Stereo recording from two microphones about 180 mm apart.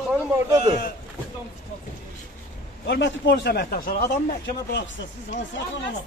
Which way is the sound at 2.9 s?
75° left (ahead or behind).